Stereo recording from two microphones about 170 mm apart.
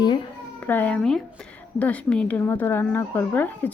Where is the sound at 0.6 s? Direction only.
10° left (ahead or behind).